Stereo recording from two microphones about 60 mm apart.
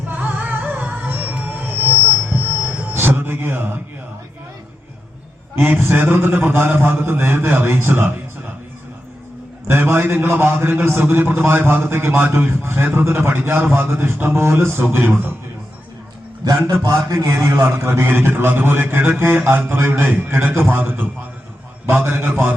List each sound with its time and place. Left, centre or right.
0.1 s music: right
5.5 s a man's voice: right
9.6 s a man's voice: right
16.4 s a man's voice: right
16.9 s a man's voice: right